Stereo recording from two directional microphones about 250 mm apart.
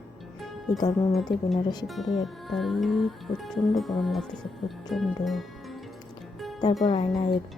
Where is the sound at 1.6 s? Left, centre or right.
Centre.